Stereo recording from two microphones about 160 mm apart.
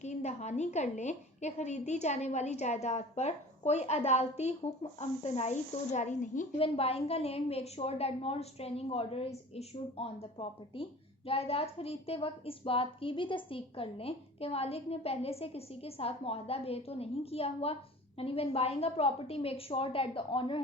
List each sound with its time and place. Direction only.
0.0 s a woman's voice: 45° left (ahead or behind)
6.6 s a woman's voice: 40° left (ahead or behind)